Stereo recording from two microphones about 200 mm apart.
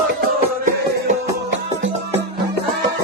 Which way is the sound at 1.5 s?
65° right (ahead or behind).